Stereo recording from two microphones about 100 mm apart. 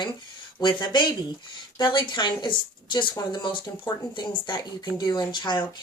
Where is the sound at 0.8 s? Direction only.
50° left (ahead or behind).